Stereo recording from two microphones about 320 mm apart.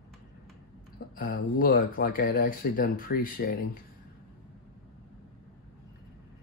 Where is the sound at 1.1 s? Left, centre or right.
Left.